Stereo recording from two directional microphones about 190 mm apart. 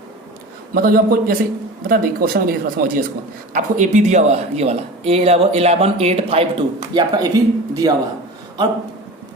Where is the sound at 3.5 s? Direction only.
40° right (ahead or behind).